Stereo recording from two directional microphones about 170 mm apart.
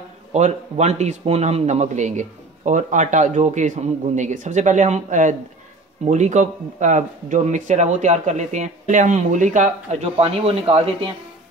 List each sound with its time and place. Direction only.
0.3 s a man's voice: 40° right (ahead or behind)